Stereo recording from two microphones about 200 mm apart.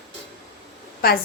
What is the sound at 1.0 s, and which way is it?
Speech, 50° left (ahead or behind).